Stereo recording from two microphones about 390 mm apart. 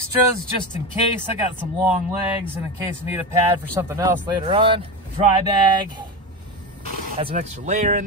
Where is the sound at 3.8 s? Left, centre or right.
Centre.